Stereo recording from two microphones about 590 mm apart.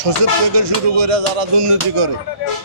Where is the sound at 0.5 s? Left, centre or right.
Right.